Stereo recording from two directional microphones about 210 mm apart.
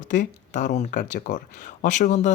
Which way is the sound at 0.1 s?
35° left (ahead or behind).